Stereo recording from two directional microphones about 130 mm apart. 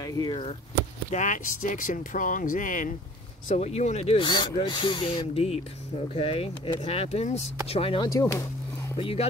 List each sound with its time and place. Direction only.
0.0 s speech: 30° left (ahead or behind)
1.1 s speech: 75° left (ahead or behind)
3.4 s speech: 55° left (ahead or behind)
4.3 s speech: 35° left (ahead or behind)
8.2 s a sound: 25° left (ahead or behind)
8.9 s speech: 45° left (ahead or behind)